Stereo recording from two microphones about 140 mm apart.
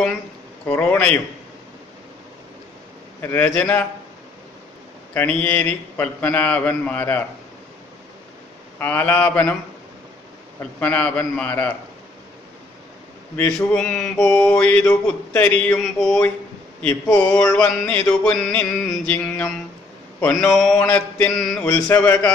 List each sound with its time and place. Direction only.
0.7 s mantra: 15° left (ahead or behind)
3.2 s mantra: 15° left (ahead or behind)
5.1 s mantra: 15° left (ahead or behind)
8.7 s mantra: 15° left (ahead or behind)
10.8 s mantra: 10° left (ahead or behind)
13.4 s mantra: 5° left (ahead or behind)
20.2 s a man's voice: 10° left (ahead or behind)
20.5 s mantra: 5° left (ahead or behind)